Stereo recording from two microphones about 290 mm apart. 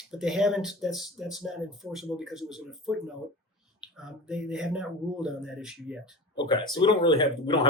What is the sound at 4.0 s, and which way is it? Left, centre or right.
Speech, centre.